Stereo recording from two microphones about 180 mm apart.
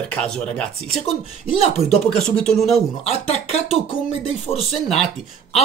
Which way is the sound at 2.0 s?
5° left (ahead or behind).